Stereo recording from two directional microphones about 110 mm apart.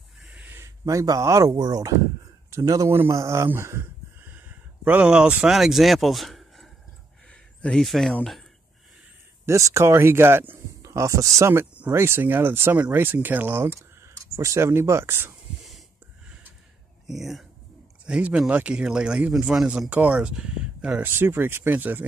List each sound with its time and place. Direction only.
0.2 s a sound: 10° right (ahead or behind)
0.6 s speech: 30° right (ahead or behind); by 8.5 s 5° left (ahead or behind)
9.5 s speech: 25° right (ahead or behind)
17.0 s a man's voice: centre (ahead or behind); by 22.0 s 15° right (ahead or behind)